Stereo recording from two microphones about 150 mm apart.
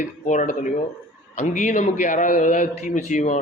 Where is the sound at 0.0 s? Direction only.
55° left (ahead or behind).